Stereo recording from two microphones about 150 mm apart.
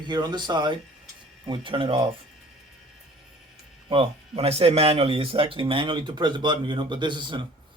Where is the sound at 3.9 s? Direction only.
40° right (ahead or behind).